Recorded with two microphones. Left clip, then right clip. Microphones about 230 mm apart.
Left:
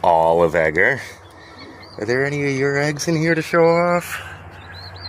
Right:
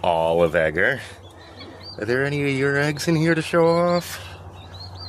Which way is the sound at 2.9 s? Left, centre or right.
Right.